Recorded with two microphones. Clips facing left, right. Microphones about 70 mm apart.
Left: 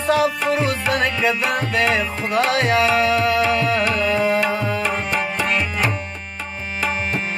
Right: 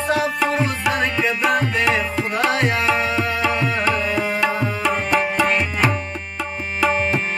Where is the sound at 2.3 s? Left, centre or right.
Left.